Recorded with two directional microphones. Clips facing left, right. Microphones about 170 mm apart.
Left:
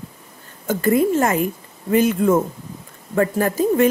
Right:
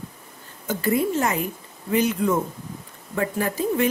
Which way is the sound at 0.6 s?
50° left (ahead or behind).